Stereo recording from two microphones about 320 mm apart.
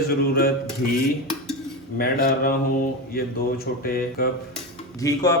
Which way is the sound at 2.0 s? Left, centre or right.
Left.